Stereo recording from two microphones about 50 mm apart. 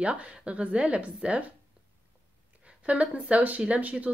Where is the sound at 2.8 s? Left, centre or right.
Right.